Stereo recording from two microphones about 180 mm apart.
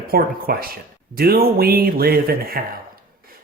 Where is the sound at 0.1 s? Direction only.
55° right (ahead or behind).